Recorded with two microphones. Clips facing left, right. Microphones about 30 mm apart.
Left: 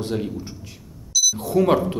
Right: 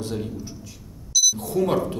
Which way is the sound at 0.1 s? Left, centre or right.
Left.